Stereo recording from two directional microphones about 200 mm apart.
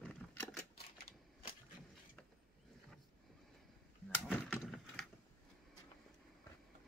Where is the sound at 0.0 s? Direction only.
5° left (ahead or behind).